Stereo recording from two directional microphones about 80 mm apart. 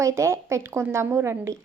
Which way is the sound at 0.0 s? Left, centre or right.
Right.